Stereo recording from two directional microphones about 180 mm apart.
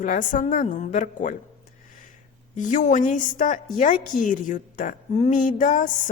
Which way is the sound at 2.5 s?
45° left (ahead or behind).